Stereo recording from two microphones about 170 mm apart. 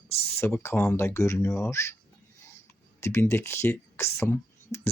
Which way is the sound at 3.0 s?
15° left (ahead or behind).